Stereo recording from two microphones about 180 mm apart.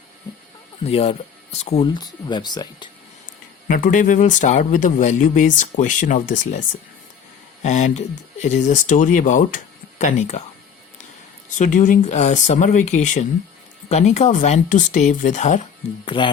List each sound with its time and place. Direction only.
0.9 s speech: 35° left (ahead or behind)
3.7 s speech: 50° left (ahead or behind)
11.5 s speech: 45° left (ahead or behind)
16.0 s speech: 30° left (ahead or behind)